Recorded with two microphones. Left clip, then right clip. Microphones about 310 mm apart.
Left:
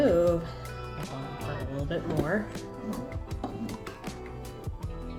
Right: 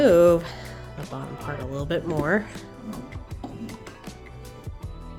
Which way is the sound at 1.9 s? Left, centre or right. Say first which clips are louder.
Right 6 dB; right.